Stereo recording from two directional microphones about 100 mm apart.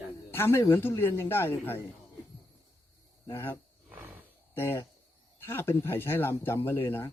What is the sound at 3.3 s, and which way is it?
Speech, 25° left (ahead or behind).